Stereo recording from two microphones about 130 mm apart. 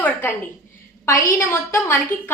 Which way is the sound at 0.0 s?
15° left (ahead or behind).